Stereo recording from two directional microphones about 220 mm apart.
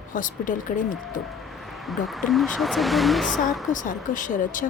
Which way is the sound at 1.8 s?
Centre (ahead or behind).